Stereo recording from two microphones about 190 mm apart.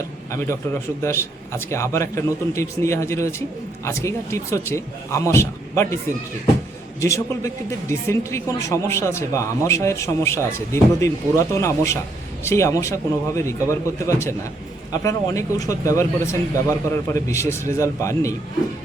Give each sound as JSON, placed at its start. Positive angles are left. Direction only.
{"t": 0.3, "sound": "speech", "side_deg": 15}
{"t": 7.0, "sound": "speech", "side_deg": 15}